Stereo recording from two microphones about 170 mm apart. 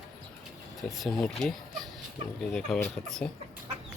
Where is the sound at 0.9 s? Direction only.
Centre (ahead or behind).